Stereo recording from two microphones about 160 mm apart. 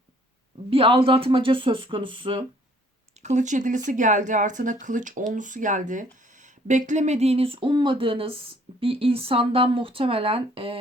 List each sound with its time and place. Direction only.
0.7 s speech: 35° right (ahead or behind)
3.2 s speech: 45° right (ahead or behind)